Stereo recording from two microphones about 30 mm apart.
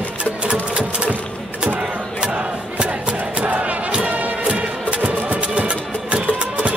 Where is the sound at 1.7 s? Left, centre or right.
Right.